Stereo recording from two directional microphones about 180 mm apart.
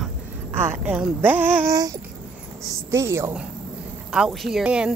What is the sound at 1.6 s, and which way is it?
Babbling, 20° right (ahead or behind).